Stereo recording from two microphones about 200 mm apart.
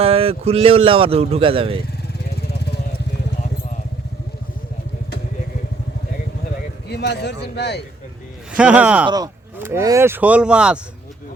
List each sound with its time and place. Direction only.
0.0 s speech: 30° right (ahead or behind)
2.5 s vehicle: 55° left (ahead or behind)
6.8 s a man's voice: 55° left (ahead or behind)
8.5 s speech: 5° right (ahead or behind)
9.0 s speech: 20° right (ahead or behind)